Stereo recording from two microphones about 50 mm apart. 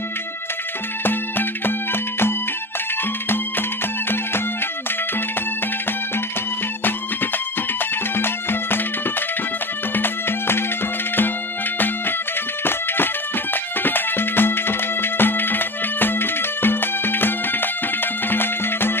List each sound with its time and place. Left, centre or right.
1.0 s music: left
8.2 s music: left
9.9 s music: left
12.6 s music: left